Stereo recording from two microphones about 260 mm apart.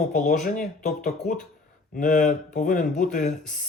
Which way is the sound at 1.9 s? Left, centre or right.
Left.